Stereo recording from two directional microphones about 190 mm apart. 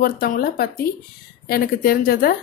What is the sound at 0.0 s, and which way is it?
A woman's voice, 50° left (ahead or behind).